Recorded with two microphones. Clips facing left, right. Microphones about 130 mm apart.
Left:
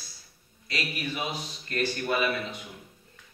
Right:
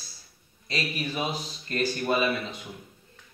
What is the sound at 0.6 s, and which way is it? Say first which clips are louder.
Speech: right 2 dB; 30° right (ahead or behind).